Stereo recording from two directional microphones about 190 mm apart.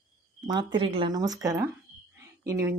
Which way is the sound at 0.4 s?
25° right (ahead or behind).